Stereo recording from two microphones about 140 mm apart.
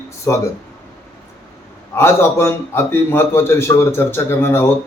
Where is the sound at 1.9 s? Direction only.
20° left (ahead or behind).